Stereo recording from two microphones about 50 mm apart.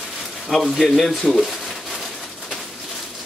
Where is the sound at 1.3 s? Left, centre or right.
Centre.